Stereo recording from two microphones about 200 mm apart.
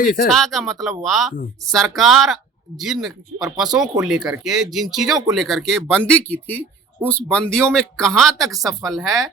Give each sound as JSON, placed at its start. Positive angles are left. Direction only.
{"t": 0.0, "sound": "speech", "side_deg": 40}
{"t": 0.3, "sound": "speech", "side_deg": 0}